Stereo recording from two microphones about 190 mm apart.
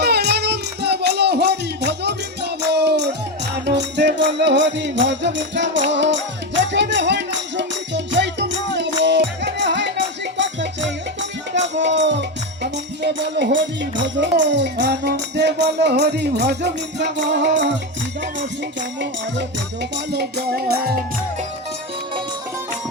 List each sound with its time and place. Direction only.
0.0 s music: 60° right (ahead or behind)
20.1 s music: 60° right (ahead or behind)